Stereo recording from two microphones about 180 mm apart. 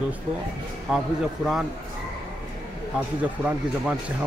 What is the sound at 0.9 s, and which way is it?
Speech, centre (ahead or behind).